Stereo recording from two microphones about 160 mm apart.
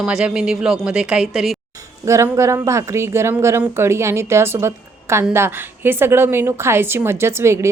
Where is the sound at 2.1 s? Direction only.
20° right (ahead or behind).